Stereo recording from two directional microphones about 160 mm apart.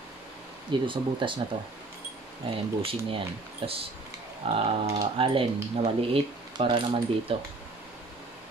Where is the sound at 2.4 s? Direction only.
35° right (ahead or behind).